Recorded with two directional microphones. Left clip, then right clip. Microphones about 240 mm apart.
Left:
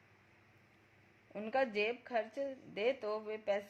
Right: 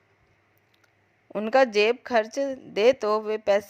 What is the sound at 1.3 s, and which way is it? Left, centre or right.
A woman's voice, right.